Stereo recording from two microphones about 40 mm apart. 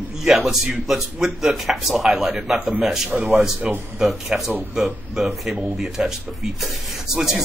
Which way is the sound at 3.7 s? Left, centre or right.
Right.